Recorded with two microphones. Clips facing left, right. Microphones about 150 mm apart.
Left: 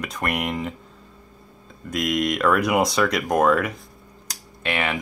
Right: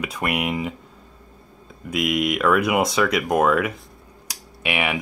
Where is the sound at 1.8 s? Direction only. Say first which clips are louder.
Right 1 dB; 5° right (ahead or behind).